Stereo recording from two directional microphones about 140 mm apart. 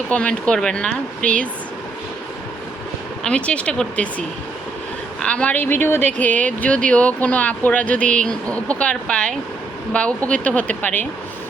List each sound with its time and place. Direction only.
0.1 s speech: 10° left (ahead or behind)
3.2 s speech: 10° left (ahead or behind)
5.2 s speech: 10° left (ahead or behind)